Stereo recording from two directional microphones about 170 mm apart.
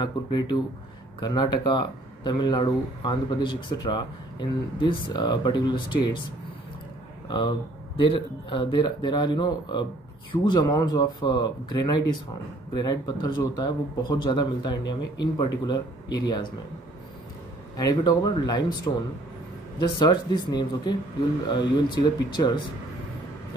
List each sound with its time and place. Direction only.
0.0 s speech: 25° left (ahead or behind)
7.2 s speech: 25° left (ahead or behind)
17.7 s speech: 25° left (ahead or behind)
19.8 s speech: 25° left (ahead or behind)